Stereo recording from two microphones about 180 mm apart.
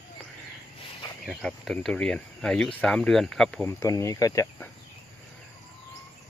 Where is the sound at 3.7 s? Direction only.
15° left (ahead or behind).